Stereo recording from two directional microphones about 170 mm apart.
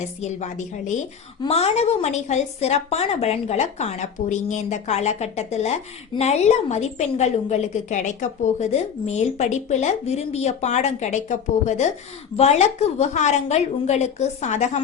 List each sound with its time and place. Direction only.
0.2 s a woman's voice: 40° left (ahead or behind)